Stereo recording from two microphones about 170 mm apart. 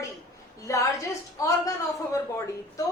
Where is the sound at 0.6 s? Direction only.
20° left (ahead or behind).